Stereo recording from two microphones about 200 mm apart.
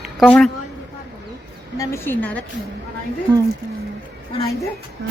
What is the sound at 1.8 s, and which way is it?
Speech, 10° left (ahead or behind).